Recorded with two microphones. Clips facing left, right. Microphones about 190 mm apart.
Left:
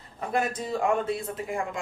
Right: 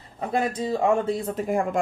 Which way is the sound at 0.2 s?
25° right (ahead or behind).